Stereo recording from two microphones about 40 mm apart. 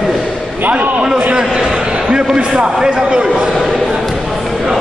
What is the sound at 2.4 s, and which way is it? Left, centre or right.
Speech, right.